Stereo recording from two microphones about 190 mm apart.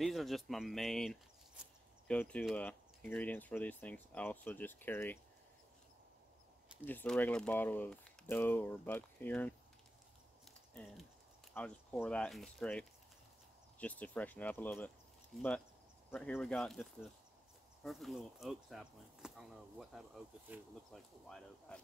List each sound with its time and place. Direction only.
0.0 s speech: centre (ahead or behind)
6.9 s speech: 10° left (ahead or behind)
10.4 s a sound: 5° left (ahead or behind)
11.5 s speech: 5° left (ahead or behind)